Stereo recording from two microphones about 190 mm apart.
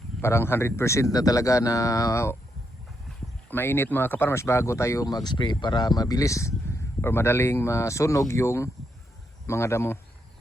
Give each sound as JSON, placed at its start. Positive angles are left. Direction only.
{"t": 0.2, "sound": "speech", "side_deg": 15}
{"t": 3.5, "sound": "speech", "side_deg": 10}